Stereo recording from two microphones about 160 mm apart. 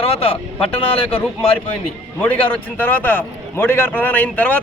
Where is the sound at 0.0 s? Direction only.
35° left (ahead or behind).